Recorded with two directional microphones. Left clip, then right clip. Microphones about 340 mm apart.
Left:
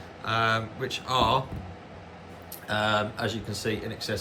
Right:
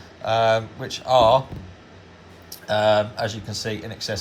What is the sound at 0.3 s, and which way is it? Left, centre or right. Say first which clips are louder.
Speech: right 7 dB; centre.